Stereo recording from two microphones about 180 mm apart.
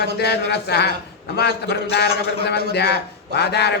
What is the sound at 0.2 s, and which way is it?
A man's voice, 65° left (ahead or behind).